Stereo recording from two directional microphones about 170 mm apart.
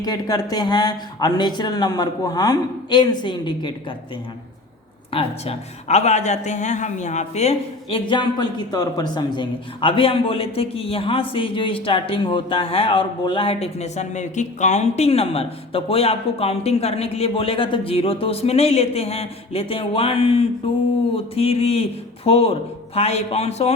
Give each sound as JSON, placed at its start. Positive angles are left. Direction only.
{"t": 0.0, "sound": "speech", "side_deg": 20}
{"t": 5.1, "sound": "a man's voice", "side_deg": 40}